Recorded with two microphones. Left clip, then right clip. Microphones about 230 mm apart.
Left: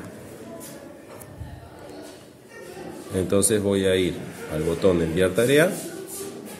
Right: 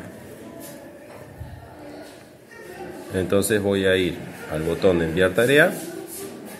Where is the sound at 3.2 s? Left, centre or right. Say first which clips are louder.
Right 1 dB; centre.